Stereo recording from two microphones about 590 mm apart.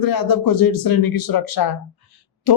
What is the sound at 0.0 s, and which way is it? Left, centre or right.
Speech, left.